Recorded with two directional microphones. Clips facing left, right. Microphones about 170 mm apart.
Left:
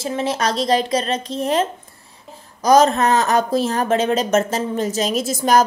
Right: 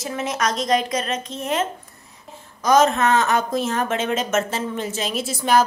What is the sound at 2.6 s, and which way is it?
Speech, 35° left (ahead or behind).